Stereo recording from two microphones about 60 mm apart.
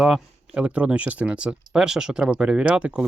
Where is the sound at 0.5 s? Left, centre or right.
Right.